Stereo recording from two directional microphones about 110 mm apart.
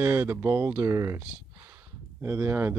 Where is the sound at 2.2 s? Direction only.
20° right (ahead or behind).